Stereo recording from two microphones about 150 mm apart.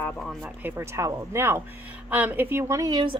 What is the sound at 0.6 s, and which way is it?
A woman's voice, 15° right (ahead or behind).